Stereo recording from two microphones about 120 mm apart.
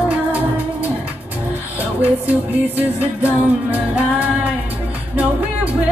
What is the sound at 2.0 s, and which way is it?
Music, 15° right (ahead or behind).